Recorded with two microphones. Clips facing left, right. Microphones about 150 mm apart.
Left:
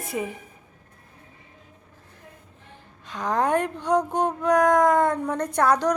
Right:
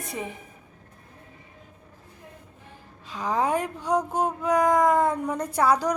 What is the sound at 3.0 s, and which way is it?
Speech, 5° right (ahead or behind).